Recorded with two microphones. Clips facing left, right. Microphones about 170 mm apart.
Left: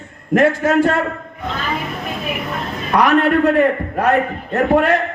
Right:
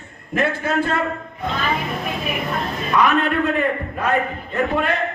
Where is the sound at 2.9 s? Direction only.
75° left (ahead or behind).